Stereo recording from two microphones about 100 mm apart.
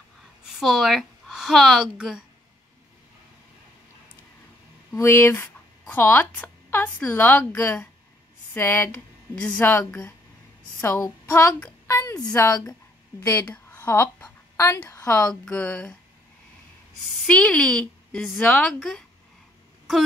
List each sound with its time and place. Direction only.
0.5 s a woman's voice: centre (ahead or behind)
4.9 s a woman's voice: 25° left (ahead or behind)
11.9 s a sound: 35° left (ahead or behind)
12.4 s speech: 30° left (ahead or behind)
13.5 s a sound: 20° left (ahead or behind)
15.0 s speech: 10° left (ahead or behind)
17.3 s a woman's voice: 10° left (ahead or behind)